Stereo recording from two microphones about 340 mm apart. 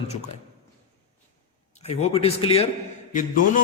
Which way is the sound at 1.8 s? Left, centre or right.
Centre.